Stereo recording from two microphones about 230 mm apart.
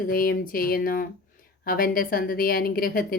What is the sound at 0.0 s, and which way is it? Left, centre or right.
Speech, left.